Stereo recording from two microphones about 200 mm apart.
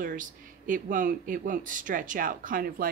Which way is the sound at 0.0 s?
45° right (ahead or behind).